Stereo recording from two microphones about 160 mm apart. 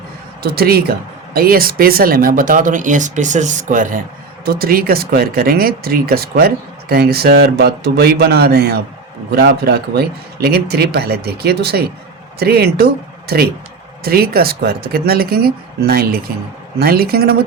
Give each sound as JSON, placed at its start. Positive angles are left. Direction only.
{"t": 0.4, "sound": "speech", "side_deg": -75}
{"t": 4.4, "sound": "speech", "side_deg": -70}